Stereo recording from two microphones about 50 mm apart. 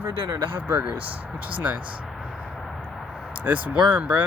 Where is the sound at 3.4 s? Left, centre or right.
Right.